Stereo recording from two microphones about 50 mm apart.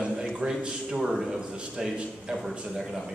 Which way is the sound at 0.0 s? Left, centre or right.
Centre.